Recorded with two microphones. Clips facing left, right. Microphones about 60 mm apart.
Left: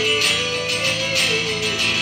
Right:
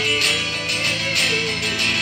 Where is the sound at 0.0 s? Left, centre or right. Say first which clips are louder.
Left 1 dB; right.